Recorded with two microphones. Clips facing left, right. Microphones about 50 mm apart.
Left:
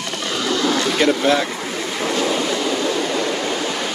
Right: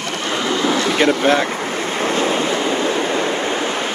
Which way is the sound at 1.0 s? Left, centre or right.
Right.